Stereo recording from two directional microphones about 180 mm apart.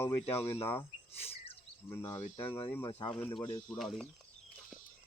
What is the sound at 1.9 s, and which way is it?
Speech, 15° left (ahead or behind).